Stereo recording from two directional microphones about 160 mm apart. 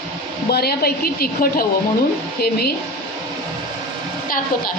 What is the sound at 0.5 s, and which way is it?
A woman's voice, 80° left.